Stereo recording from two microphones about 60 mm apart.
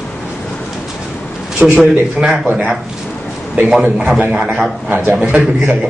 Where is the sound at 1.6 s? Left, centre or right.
Centre.